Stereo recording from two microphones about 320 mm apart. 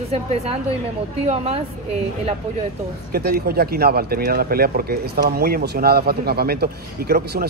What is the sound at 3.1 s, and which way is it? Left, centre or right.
Speech, right.